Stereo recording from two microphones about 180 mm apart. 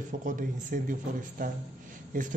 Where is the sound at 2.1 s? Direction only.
45° right (ahead or behind).